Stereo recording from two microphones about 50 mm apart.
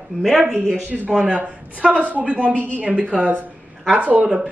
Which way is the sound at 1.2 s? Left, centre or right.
Right.